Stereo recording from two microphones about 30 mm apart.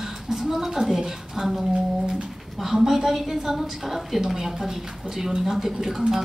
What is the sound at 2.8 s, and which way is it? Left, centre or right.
A woman's voice, centre.